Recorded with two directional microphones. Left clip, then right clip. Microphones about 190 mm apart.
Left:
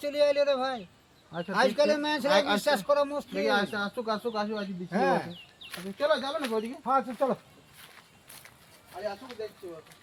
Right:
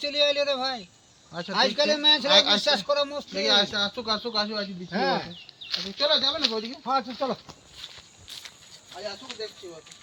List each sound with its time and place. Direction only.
0.0 s speech: centre (ahead or behind)
2.3 s speech: 25° left (ahead or behind)
2.6 s speech: centre (ahead or behind)
3.3 s speech: 25° left (ahead or behind)
4.5 s speech: centre (ahead or behind)
6.0 s speech: 15° left (ahead or behind)
6.8 s speech: centre (ahead or behind)